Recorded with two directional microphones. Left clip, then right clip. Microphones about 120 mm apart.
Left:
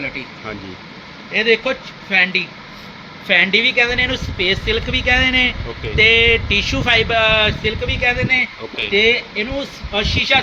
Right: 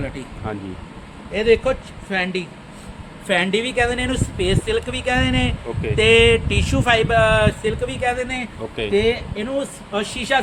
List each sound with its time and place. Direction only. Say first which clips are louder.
1.3 s speech: left 1 dB; 40° right (ahead or behind); by 5.5 s 55° right (ahead or behind)
6.0 s a sound: left 2 dB; 50° right (ahead or behind)
7.3 s speech: left 2 dB; 35° right (ahead or behind)